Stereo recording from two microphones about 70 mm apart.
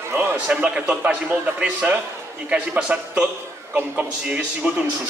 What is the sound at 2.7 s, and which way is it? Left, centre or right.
Speech, right.